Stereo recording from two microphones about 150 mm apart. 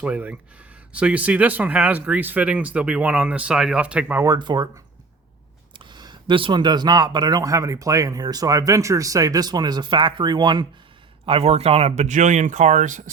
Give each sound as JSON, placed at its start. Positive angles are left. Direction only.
{"t": 0.0, "sound": "speech", "side_deg": -10}
{"t": 4.2, "sound": "speech", "side_deg": -25}
{"t": 5.7, "sound": "speech", "side_deg": -30}
{"t": 11.3, "sound": "speech", "side_deg": -40}